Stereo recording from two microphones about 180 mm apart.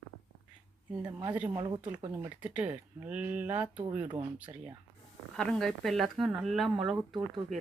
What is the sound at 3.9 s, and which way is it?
Speech, 25° right (ahead or behind).